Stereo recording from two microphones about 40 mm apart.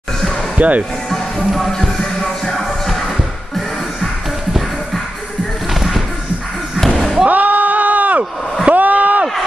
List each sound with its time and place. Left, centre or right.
0.6 s speech: right
1.1 s music: centre
2.5 s music: centre
5.7 s music: centre
7.2 s a sound: right